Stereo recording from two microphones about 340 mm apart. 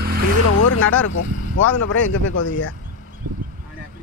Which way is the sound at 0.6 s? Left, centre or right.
Left.